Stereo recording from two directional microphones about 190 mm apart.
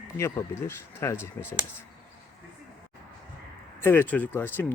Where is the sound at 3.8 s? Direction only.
10° left (ahead or behind).